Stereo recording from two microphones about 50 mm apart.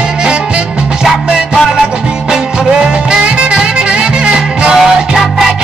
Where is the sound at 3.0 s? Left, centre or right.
Centre.